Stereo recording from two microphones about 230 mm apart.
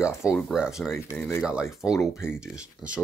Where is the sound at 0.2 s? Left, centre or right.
Centre.